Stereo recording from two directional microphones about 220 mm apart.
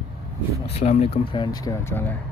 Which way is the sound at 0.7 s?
30° left (ahead or behind).